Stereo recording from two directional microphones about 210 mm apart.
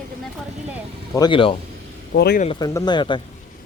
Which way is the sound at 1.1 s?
20° left (ahead or behind).